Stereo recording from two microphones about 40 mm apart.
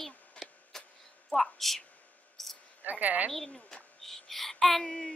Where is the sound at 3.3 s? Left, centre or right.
Centre.